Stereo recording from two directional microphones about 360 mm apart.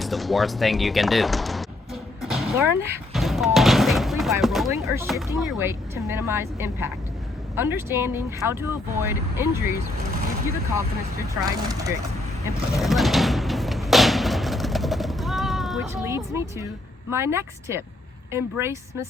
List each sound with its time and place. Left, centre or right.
0.0 s music: centre
2.8 s speech: centre
12.7 s a sound: centre
16.0 s speech: centre